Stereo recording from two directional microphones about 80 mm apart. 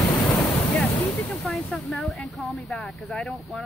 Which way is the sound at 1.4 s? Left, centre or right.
Centre.